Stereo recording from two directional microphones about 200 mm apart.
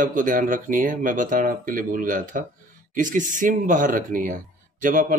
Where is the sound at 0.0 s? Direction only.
40° right (ahead or behind).